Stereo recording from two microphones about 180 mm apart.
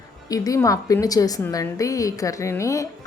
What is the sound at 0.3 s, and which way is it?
A woman's voice, 20° left (ahead or behind).